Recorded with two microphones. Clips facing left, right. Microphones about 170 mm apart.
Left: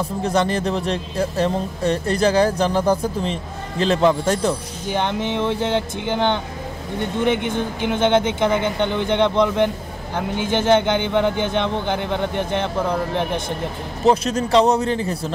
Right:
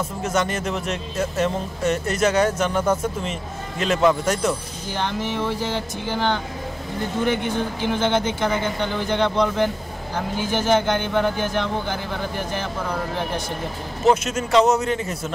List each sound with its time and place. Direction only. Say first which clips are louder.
0.2 s speech: left 4 dB; 30° left (ahead or behind)
4.9 s speech: left 3 dB; 20° left (ahead or behind)
5.6 s music: left 5 dB; 70° left (ahead or behind)
6.0 s speech: even; 20° left (ahead or behind)
14.0 s speech: left 2 dB; 35° left (ahead or behind)